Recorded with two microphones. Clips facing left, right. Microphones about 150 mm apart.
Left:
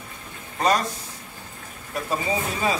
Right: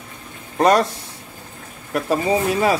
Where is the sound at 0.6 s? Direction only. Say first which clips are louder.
Right 7 dB; 65° right (ahead or behind).